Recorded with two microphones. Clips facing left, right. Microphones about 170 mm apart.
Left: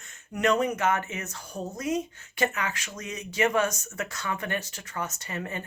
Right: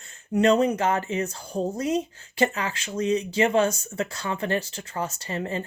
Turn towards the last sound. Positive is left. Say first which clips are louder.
# right 5 dB
turn(degrees=-30)  # may be behind; listen again after turning